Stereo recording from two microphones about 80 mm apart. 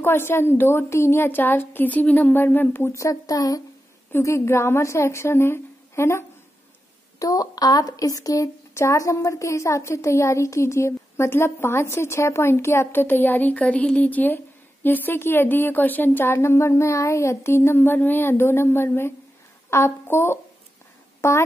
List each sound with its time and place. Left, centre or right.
0.0 s a woman's voice: left
4.2 s speech: left
7.2 s speech: left